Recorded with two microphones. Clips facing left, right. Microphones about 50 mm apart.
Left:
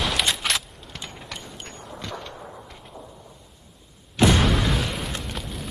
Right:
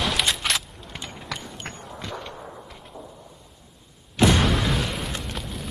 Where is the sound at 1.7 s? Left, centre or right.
Right.